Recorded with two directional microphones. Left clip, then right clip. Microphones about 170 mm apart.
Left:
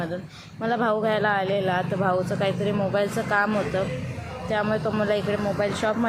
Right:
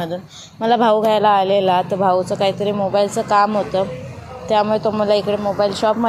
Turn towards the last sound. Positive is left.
turn(degrees=-20)  # may be behind; listen again after turning